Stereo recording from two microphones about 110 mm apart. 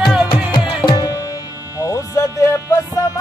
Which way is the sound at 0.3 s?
45° left (ahead or behind).